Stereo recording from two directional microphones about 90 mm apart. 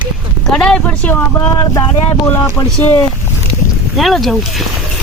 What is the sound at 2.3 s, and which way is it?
Speech, 30° left (ahead or behind).